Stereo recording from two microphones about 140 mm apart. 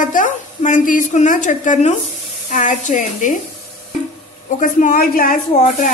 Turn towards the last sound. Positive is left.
turn(degrees=65)  # may be behind; listen again after turning